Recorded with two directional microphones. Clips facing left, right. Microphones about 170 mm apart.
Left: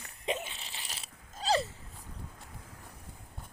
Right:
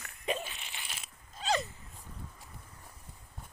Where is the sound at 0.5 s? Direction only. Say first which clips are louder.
Even; 35° left (ahead or behind).